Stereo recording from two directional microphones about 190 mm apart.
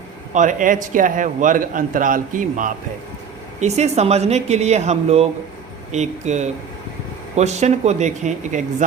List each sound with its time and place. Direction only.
0.3 s a man's voice: 45° right (ahead or behind)